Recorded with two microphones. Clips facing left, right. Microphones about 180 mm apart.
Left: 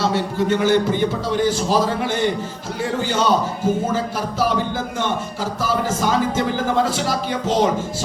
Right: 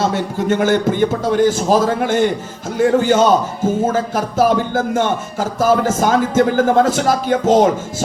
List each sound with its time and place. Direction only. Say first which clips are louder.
0.0 s speech: right 2 dB; 50° right (ahead or behind)